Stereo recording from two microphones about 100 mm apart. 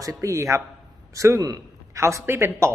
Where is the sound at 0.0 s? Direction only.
30° right (ahead or behind).